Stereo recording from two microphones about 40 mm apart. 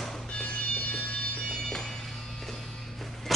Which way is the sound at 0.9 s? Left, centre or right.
Left.